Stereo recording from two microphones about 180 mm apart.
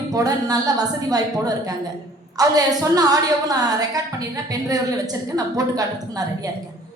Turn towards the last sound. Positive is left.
turn(degrees=-20)  # may be behind; listen again after turning